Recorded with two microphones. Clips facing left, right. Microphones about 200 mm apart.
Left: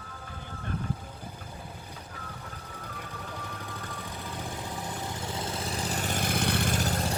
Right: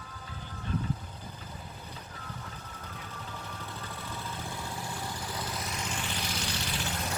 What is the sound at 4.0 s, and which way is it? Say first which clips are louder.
Vehicle: left 1 dB; 15° left (ahead or behind).